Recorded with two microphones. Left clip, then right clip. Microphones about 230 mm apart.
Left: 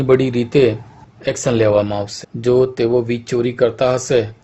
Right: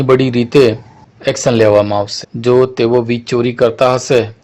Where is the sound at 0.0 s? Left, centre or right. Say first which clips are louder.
Right 3 dB; centre.